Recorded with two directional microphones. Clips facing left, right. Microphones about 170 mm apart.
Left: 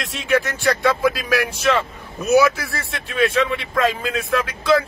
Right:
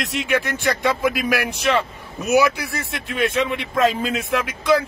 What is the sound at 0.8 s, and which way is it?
A man's voice, 20° right (ahead or behind).